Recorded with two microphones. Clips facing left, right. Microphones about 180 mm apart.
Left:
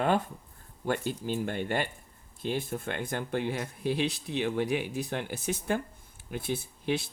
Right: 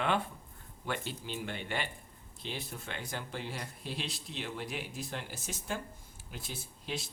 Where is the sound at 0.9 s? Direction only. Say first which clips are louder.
Left 8 dB; 45° left (ahead or behind).